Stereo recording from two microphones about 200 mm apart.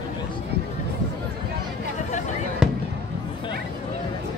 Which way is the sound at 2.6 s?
5° right (ahead or behind).